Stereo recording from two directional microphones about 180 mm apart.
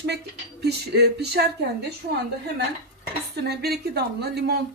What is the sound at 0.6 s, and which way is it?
Speech, 65° right (ahead or behind).